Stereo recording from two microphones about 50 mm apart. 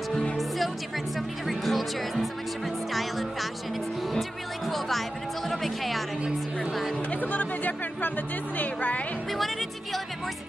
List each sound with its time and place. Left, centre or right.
1.5 s speech: centre
4.1 s music: centre
7.1 s speech: left
9.3 s speech: centre